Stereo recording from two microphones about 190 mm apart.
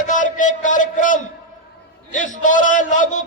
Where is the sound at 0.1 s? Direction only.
40° left (ahead or behind).